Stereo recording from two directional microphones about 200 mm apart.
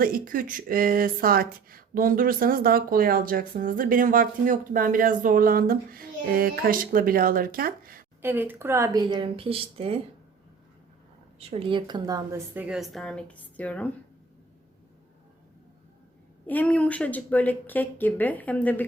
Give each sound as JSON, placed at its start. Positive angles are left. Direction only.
{"t": 0.0, "sound": "speech", "side_deg": -45}
{"t": 8.2, "sound": "speech", "side_deg": -10}
{"t": 11.3, "sound": "speech", "side_deg": -30}
{"t": 12.5, "sound": "speech", "side_deg": -5}
{"t": 16.5, "sound": "speech", "side_deg": 10}